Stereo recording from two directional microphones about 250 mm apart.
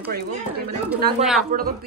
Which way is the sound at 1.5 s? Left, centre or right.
Right.